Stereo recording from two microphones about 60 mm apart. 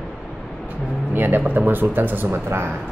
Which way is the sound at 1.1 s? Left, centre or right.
Right.